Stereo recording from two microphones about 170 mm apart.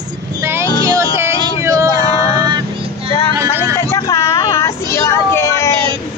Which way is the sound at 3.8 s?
20° left (ahead or behind).